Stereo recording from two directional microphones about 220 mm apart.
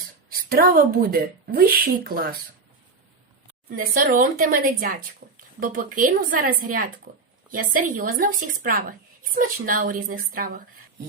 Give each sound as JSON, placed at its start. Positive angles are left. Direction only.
{"t": 0.3, "sound": "a woman's voice", "side_deg": -40}
{"t": 3.8, "sound": "a woman's voice", "side_deg": -40}